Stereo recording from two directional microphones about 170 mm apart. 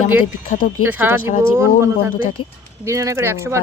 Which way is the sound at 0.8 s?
10° right (ahead or behind).